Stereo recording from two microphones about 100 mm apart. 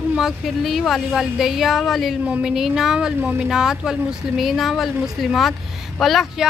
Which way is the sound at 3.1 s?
20° right (ahead or behind).